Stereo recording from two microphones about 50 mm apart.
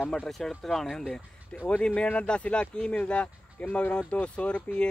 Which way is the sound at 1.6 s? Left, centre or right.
Left.